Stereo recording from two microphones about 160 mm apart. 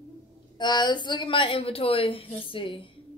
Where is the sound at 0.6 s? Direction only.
30° left (ahead or behind).